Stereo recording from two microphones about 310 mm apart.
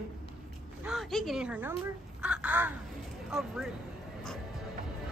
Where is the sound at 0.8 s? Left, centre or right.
Centre.